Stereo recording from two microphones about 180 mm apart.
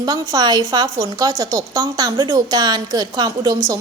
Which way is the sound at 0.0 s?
20° right (ahead or behind).